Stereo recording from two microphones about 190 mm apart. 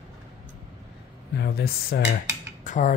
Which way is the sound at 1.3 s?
55° left (ahead or behind).